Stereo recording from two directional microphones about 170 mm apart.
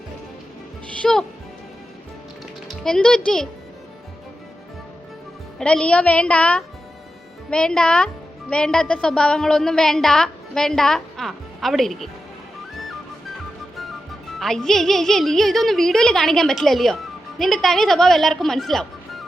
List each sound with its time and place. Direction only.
1.0 s a woman's voice: centre (ahead or behind)
2.6 s speech: 5° left (ahead or behind)
5.5 s a woman's voice: 5° left (ahead or behind)
14.3 s a woman's voice: centre (ahead or behind)